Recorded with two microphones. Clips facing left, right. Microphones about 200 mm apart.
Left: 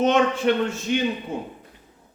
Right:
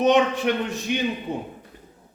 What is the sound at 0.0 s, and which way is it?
Speech, 15° right (ahead or behind).